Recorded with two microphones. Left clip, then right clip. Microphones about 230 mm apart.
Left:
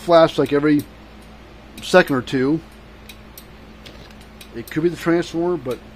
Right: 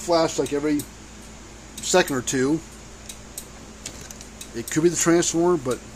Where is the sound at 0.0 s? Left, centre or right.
Left.